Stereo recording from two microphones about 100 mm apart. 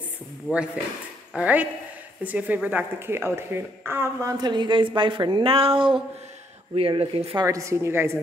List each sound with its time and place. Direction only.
1.3 s a woman's voice: 15° right (ahead or behind); by 7.3 s 75° right (ahead or behind)
7.4 s a woman's voice: 30° right (ahead or behind)